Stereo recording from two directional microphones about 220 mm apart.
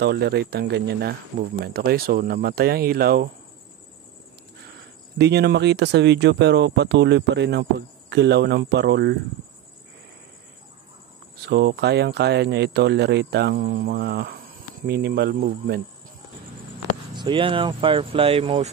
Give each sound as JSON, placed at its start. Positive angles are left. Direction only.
{"t": 0.0, "sound": "speech", "side_deg": -45}
{"t": 5.1, "sound": "speech", "side_deg": -50}
{"t": 11.3, "sound": "speech", "side_deg": -45}
{"t": 17.1, "sound": "speech", "side_deg": -20}